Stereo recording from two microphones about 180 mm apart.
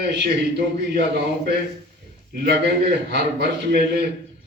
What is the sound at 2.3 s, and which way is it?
A man's voice, 60° right (ahead or behind).